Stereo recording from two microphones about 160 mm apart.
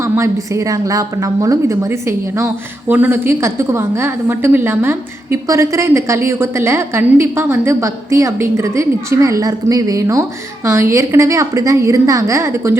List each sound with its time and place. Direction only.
0.0 s a woman's voice: 20° right (ahead or behind)